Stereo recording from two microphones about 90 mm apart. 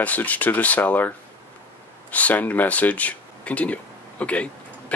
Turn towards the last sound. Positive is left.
turn(degrees=15)  # may be behind; listen again after turning